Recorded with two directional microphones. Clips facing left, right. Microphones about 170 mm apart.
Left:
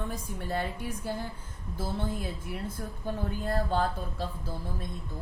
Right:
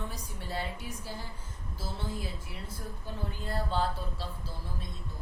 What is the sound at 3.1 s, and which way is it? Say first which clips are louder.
A man's voice: left 7 dB; 50° left (ahead or behind).